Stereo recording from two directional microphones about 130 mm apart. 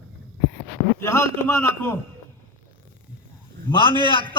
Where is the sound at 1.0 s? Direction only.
20° left (ahead or behind).